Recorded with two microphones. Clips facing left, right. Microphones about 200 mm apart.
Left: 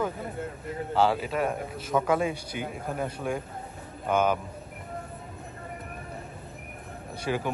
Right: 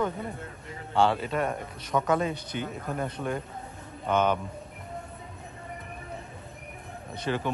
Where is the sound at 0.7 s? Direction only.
5° left (ahead or behind).